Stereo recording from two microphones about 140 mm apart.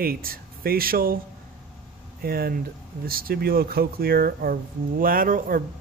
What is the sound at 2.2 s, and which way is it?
Speech, 90° right.